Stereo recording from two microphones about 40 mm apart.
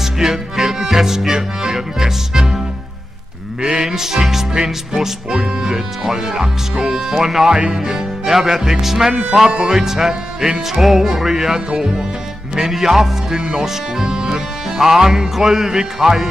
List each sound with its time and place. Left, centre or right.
0.0 s music: centre
3.6 s speech: centre
10.7 s music: centre
11.1 s speech: centre